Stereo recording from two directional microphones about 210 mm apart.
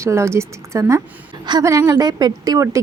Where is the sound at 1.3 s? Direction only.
20° right (ahead or behind).